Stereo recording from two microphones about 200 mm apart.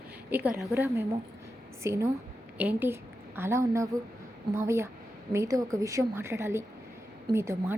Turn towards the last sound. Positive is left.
turn(degrees=-15)  # may be behind; listen again after turning